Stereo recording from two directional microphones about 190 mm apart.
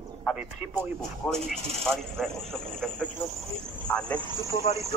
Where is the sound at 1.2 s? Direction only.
5° left (ahead or behind).